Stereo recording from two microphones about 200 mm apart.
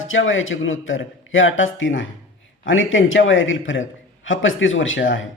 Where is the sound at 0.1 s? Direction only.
75° left (ahead or behind).